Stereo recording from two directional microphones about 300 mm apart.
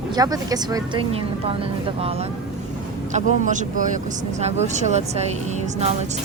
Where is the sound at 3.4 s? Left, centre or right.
Right.